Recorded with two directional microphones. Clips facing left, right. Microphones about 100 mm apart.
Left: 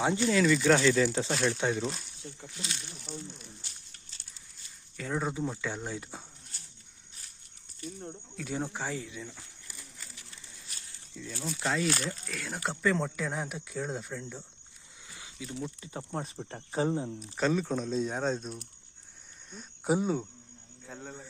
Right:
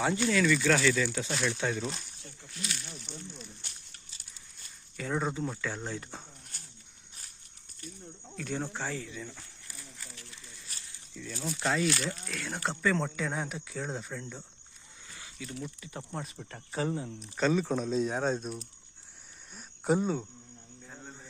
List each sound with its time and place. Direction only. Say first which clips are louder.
0.0 s speech: left 1 dB; 20° left (ahead or behind)
1.8 s speech: left 2 dB; centre (ahead or behind)
4.9 s speech: even; centre (ahead or behind)
8.4 s speech: even; 10° left (ahead or behind)
11.1 s speech: right 1 dB; 10° left (ahead or behind)
11.9 s speech: even; 40° left (ahead or behind)
12.3 s speech: right 1 dB; centre (ahead or behind)
15.1 s a sound: left 1 dB; 20° left (ahead or behind)
15.5 s speech: left 3 dB; 25° left (ahead or behind)
17.3 s speech: right 1 dB; centre (ahead or behind)
20.8 s a man's voice: left 5 dB; 90° left